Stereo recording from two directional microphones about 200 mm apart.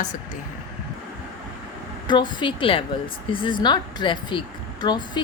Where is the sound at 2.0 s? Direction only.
20° left (ahead or behind).